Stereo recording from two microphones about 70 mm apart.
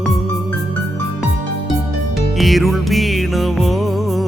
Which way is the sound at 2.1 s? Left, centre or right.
Centre.